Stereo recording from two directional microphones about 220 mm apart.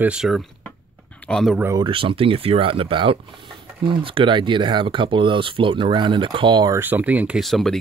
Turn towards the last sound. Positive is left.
turn(degrees=0)  # may be behind; listen again after turning